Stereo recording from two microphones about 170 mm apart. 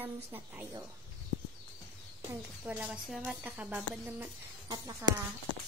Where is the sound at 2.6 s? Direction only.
10° right (ahead or behind).